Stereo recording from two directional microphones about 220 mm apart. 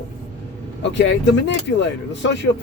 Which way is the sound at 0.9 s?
55° left (ahead or behind).